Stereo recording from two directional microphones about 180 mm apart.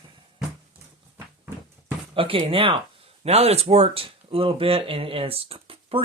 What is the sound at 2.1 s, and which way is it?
Speech, 30° right (ahead or behind).